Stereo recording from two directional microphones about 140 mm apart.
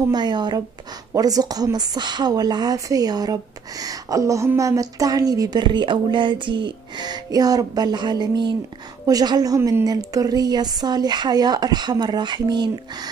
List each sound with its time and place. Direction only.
0.1 s speech: 30° right (ahead or behind)